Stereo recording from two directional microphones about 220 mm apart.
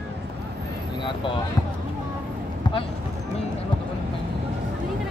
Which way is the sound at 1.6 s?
15° left (ahead or behind).